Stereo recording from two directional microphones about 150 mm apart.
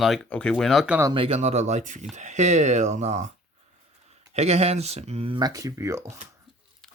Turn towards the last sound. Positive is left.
turn(degrees=-20)  # may be behind; listen again after turning